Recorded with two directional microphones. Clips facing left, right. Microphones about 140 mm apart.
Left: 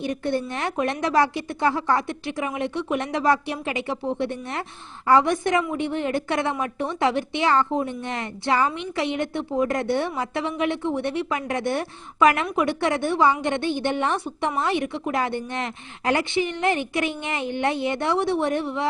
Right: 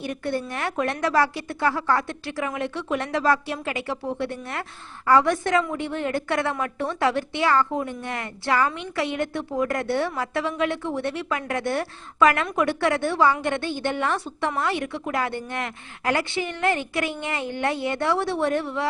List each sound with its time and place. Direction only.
0.0 s a woman's voice: 20° left (ahead or behind)